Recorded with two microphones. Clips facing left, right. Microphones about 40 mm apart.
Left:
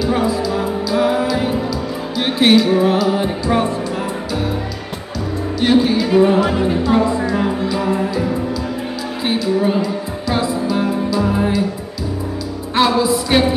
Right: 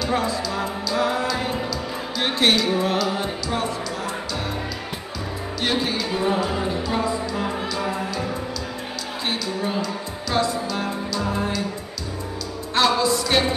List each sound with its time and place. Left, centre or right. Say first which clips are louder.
0.0 s music: left 6 dB; centre
3.4 s speech: left 10 dB; left
5.6 s music: left 10 dB; centre
6.3 s speech: left 8 dB; left
7.4 s music: left 7 dB; centre
9.3 s music: left 10 dB; centre
12.7 s music: left 4 dB; centre